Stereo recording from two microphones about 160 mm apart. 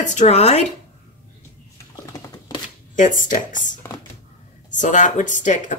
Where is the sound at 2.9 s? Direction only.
50° left (ahead or behind).